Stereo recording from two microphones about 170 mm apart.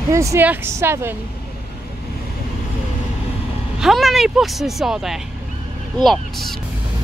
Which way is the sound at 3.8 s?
Centre (ahead or behind).